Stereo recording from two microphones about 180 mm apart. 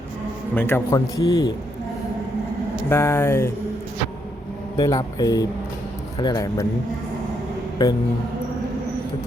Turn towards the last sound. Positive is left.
turn(degrees=25)  # may be behind; listen again after turning